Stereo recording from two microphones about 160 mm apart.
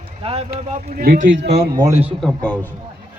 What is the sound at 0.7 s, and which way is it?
Speech, 65° right (ahead or behind).